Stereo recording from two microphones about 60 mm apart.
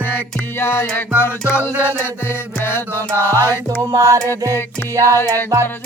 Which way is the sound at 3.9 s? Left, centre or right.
Right.